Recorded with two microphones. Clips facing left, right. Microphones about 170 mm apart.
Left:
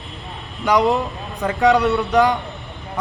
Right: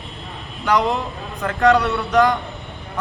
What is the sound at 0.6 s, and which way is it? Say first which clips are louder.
Speech: left 2 dB; 15° left (ahead or behind).